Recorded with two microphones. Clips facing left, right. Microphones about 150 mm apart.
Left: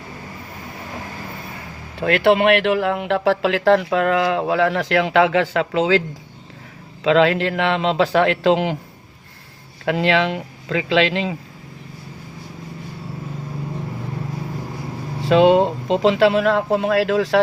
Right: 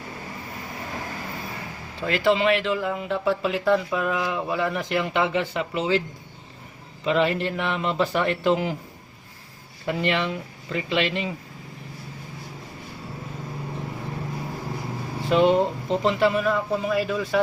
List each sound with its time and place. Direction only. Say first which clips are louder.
2.0 s speech: left 6 dB; 65° left (ahead or behind); by 6.0 s 90° left
7.0 s speech: left 7 dB; 90° left
9.8 s speech: left 6 dB; 90° left
15.3 s speech: left 6 dB; 90° left